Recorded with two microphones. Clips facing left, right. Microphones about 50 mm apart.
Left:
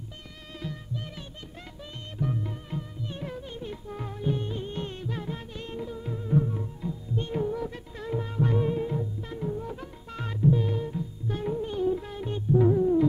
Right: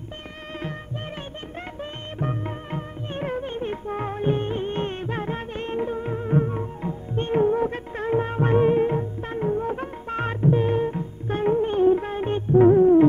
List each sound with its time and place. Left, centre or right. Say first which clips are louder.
1.8 s music: right 3 dB; right